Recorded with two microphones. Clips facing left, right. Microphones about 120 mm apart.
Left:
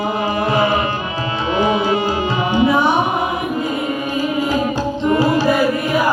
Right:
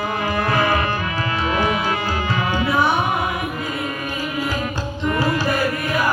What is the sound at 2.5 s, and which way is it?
Carnatic music, 20° left (ahead or behind).